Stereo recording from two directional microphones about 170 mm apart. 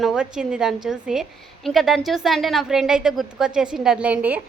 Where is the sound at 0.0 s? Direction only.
5° right (ahead or behind).